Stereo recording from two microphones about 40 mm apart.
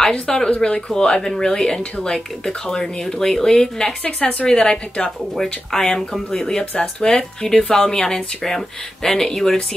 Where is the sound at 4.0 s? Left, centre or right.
Left.